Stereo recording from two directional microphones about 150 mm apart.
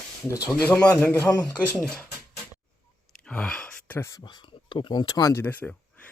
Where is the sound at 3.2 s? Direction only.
5° left (ahead or behind).